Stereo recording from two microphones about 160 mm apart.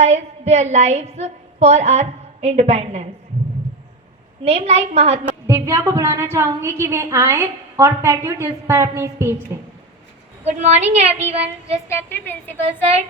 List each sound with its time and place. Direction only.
0.0 s a woman's voice: 45° right (ahead or behind)
4.4 s a woman's voice: 45° right (ahead or behind)
5.5 s a woman's voice: 20° right (ahead or behind)
10.4 s a woman's voice: 45° right (ahead or behind)
11.3 s child singing: 40° right (ahead or behind)
11.9 s a woman's voice: 15° left (ahead or behind)